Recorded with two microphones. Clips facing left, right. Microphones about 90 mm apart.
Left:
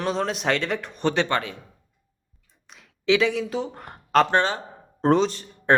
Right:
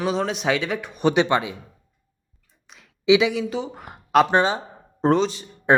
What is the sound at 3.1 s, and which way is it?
Speech, 15° right (ahead or behind).